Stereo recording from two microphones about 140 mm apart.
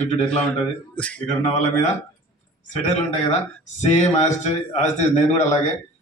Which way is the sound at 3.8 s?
55° left (ahead or behind).